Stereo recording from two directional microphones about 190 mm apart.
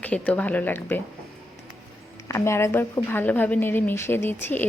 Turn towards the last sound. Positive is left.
turn(degrees=10)  # may be behind; listen again after turning